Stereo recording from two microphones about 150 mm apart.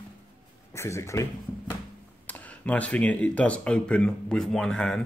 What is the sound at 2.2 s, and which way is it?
Speech, 10° left (ahead or behind).